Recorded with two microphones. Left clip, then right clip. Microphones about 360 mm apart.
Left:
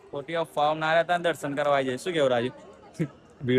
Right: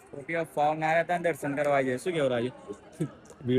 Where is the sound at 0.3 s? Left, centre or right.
Centre.